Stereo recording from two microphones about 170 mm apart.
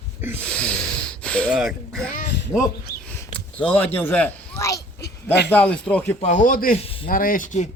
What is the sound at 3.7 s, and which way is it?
Speech, 10° left (ahead or behind).